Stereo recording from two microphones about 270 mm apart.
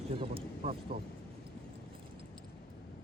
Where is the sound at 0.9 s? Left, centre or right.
Right.